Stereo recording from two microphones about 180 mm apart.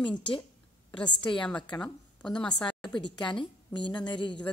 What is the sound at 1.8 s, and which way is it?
Speech, 5° left (ahead or behind).